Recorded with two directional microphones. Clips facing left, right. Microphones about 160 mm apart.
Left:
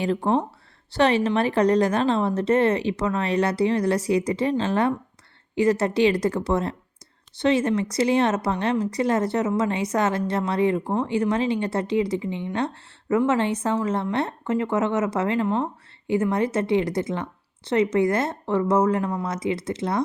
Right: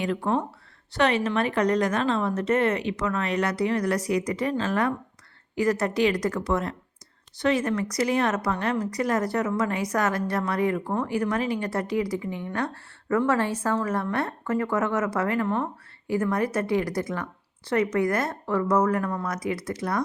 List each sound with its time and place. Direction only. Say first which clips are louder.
0.0 s speech: left 3 dB; 30° left (ahead or behind)